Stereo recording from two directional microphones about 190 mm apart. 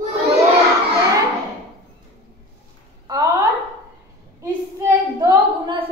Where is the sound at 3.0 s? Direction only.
20° right (ahead or behind).